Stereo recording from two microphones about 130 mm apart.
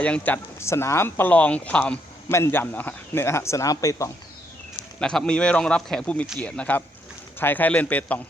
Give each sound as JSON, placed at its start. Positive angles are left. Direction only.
{"t": 0.0, "sound": "speech", "side_deg": 10}
{"t": 0.6, "sound": "speech", "side_deg": 20}
{"t": 4.9, "sound": "speech", "side_deg": 5}